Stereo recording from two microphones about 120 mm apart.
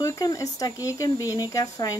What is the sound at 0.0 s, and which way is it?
A woman's voice, 30° left (ahead or behind).